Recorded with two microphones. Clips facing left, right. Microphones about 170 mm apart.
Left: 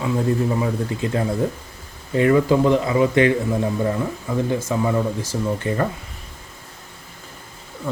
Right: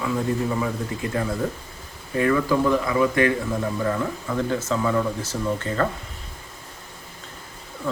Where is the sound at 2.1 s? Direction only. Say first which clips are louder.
Left 4 dB; 25° left (ahead or behind).